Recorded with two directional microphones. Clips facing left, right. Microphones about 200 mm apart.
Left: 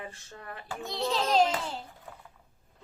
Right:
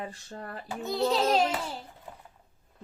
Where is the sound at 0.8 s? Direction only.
5° right (ahead or behind).